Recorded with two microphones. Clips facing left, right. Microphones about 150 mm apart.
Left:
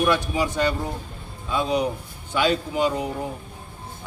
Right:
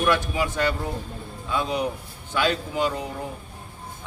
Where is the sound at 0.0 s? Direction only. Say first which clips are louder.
Left 1 dB; 15° left (ahead or behind).